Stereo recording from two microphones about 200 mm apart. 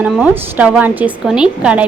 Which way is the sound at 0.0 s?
5° right (ahead or behind).